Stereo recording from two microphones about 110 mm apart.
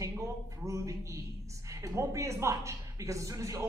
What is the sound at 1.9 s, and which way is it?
Speech, 25° right (ahead or behind).